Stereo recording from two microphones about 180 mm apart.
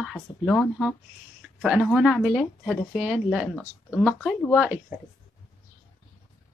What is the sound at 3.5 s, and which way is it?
Speech, 10° left (ahead or behind).